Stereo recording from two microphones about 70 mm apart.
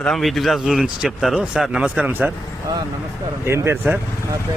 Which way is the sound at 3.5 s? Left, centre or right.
Right.